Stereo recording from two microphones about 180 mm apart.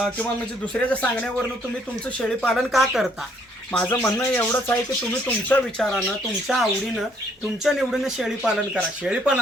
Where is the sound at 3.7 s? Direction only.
10° left (ahead or behind).